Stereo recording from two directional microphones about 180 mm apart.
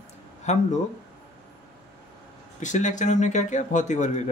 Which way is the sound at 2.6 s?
45° left (ahead or behind).